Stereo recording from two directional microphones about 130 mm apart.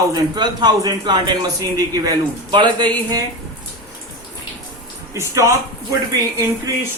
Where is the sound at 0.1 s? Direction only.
30° right (ahead or behind).